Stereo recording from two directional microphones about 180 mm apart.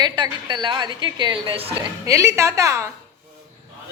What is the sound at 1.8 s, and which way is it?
Speech, 15° right (ahead or behind).